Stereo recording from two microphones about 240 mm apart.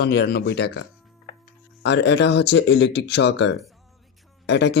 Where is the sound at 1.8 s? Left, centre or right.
Left.